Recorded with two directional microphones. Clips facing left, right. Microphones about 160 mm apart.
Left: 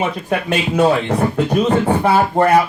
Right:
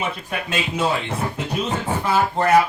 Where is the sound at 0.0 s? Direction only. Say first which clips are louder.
Left 7 dB; 60° left (ahead or behind).